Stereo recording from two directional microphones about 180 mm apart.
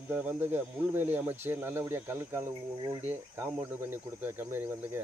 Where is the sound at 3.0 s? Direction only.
10° right (ahead or behind).